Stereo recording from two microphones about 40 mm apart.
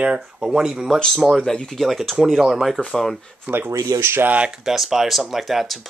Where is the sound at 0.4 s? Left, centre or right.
Centre.